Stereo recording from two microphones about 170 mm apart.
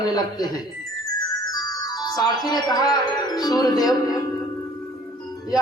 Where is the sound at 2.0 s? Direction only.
20° left (ahead or behind).